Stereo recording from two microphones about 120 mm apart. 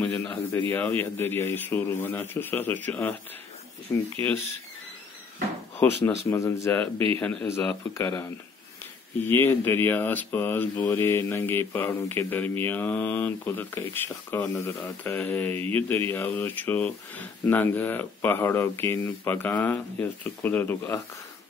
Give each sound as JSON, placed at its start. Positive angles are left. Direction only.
{"t": 0.0, "sound": "a sound", "side_deg": 10}
{"t": 0.7, "sound": "speech", "side_deg": 15}
{"t": 5.8, "sound": "speech", "side_deg": 15}
{"t": 7.2, "sound": "speech", "side_deg": 10}
{"t": 7.4, "sound": "speech", "side_deg": 20}